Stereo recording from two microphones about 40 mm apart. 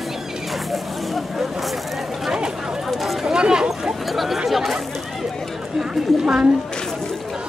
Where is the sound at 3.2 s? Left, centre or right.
Centre.